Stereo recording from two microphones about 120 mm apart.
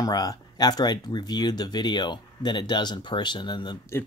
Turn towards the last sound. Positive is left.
turn(degrees=40)  # may be behind; listen again after turning